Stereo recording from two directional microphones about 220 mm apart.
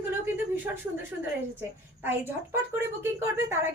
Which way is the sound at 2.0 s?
10° right (ahead or behind).